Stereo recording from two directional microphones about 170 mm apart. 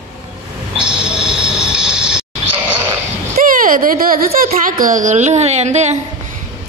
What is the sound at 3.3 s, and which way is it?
Speech, 55° right (ahead or behind).